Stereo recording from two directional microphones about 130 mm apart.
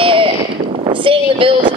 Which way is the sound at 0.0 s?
40° right (ahead or behind).